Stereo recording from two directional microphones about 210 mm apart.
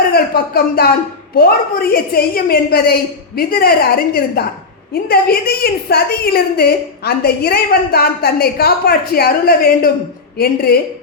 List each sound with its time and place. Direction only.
0.1 s a woman's voice: 45° left (ahead or behind)